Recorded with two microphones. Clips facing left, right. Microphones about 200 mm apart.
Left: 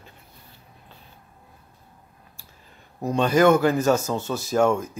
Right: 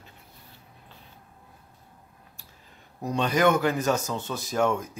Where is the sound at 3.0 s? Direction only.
45° left (ahead or behind).